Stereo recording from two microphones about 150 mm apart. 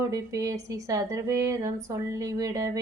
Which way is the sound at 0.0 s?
20° right (ahead or behind).